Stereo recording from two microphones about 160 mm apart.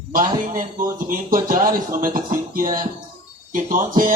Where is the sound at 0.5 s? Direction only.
60° right (ahead or behind).